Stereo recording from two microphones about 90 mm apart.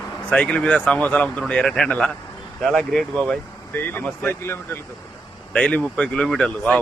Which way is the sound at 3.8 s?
25° left (ahead or behind).